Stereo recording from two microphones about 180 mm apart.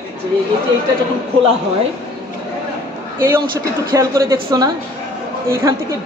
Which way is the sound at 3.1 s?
10° right (ahead or behind).